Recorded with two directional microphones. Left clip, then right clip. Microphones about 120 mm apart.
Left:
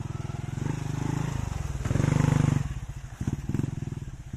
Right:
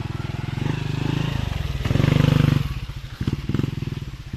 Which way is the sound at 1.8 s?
40° right (ahead or behind).